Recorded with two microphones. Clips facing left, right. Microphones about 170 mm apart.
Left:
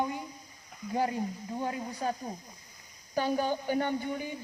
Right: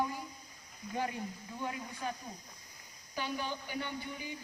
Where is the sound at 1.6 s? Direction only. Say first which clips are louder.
Left 6 dB; 40° left (ahead or behind).